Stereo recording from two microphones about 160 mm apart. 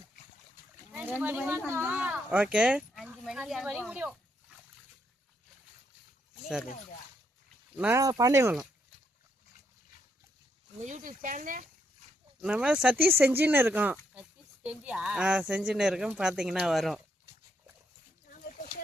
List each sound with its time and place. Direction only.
1.2 s speech: 10° right (ahead or behind)
7.8 s speech: 15° right (ahead or behind)
10.8 s speech: 50° right (ahead or behind)
12.4 s speech: 10° right (ahead or behind)